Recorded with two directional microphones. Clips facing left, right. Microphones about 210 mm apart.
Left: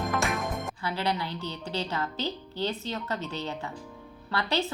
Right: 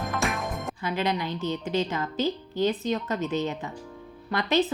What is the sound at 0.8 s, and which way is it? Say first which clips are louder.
Speech: right 4 dB; 15° right (ahead or behind).